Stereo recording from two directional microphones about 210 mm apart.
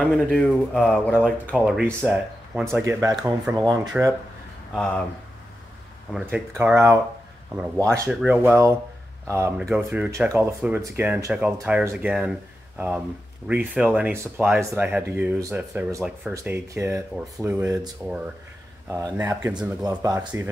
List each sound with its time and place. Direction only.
0.0 s speech: 5° left (ahead or behind)
6.1 s speech: 5° right (ahead or behind)